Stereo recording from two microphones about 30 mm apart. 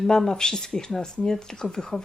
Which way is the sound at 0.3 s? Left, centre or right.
Left.